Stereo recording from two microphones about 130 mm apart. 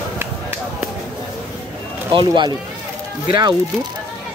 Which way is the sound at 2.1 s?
40° right (ahead or behind).